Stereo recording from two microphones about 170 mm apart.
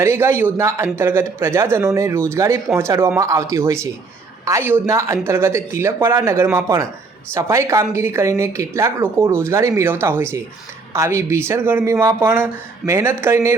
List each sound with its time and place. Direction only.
0.0 s a woman's voice: 15° right (ahead or behind)